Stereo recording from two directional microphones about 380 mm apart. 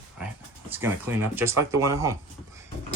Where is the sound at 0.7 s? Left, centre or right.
Centre.